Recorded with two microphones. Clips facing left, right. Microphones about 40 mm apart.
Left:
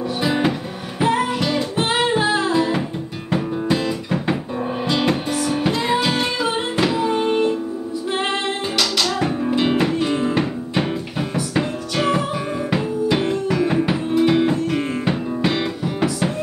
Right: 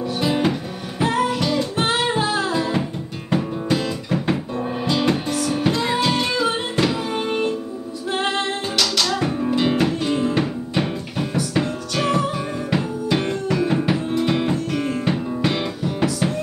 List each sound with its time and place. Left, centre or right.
0.2 s music: centre
5.7 s music: left
6.4 s music: centre
8.7 s music: centre